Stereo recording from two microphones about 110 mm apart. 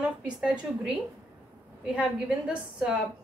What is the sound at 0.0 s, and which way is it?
Speech, 10° right (ahead or behind).